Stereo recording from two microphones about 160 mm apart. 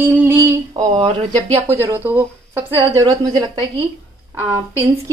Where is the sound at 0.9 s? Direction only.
35° right (ahead or behind).